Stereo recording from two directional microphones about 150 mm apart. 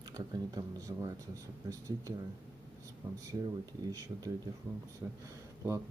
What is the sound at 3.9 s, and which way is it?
Speech, 25° right (ahead or behind).